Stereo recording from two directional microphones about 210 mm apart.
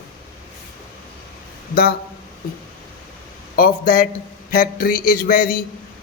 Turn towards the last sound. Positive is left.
turn(degrees=45)  # may be behind; listen again after turning